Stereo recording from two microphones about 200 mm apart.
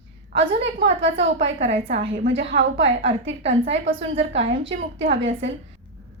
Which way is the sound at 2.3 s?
60° right (ahead or behind).